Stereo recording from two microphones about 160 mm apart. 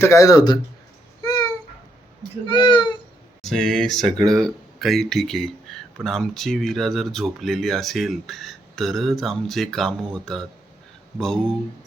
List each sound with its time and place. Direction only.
0.0 s speech: 20° left (ahead or behind)
1.2 s babbling: 20° left (ahead or behind)
2.5 s speech: 30° left (ahead or behind)
3.4 s speech: centre (ahead or behind)